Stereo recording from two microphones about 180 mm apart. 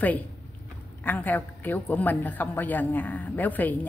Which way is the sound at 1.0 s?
10° left (ahead or behind).